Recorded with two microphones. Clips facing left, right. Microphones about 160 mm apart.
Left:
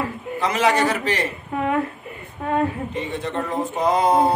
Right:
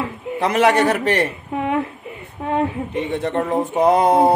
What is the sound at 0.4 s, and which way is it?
Speech, 60° right (ahead or behind).